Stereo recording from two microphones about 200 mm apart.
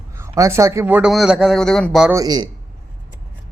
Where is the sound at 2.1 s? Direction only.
20° right (ahead or behind).